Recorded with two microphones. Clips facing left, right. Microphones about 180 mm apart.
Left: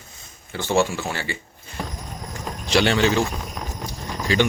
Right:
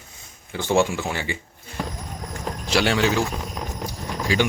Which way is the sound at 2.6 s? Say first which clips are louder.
Left 2 dB; 5° right (ahead or behind).